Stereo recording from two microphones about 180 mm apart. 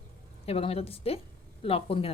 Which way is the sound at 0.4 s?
35° left (ahead or behind).